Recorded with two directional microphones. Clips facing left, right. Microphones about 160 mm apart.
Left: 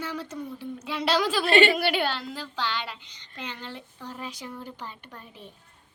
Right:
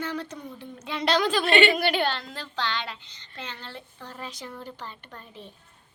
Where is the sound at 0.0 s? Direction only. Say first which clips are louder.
Right 2 dB; 5° left (ahead or behind).